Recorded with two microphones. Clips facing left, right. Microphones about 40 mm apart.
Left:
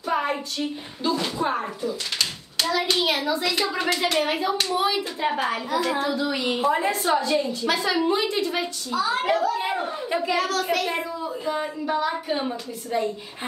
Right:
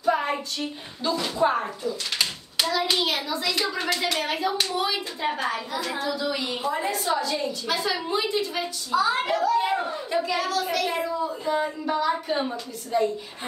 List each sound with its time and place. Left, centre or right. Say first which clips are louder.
0.0 s a sound: right 1 dB; centre
1.4 s speech: right 2 dB; centre
3.0 s a woman's voice: left 3 dB; centre
5.9 s a child's voice: left 2 dB; left
8.9 s speech: right 2 dB; centre
9.4 s speech: right 2 dB; centre
10.3 s a woman's voice: left 2 dB; left
10.9 s a woman's voice: right 1 dB; centre